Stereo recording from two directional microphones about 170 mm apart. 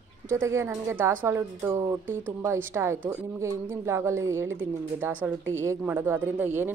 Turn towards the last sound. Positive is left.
turn(degrees=-10)  # may be behind; listen again after turning